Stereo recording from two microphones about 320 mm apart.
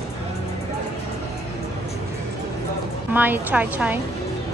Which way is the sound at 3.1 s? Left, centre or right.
Centre.